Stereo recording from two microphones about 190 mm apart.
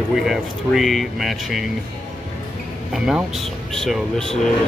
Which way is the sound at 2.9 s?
5° right (ahead or behind).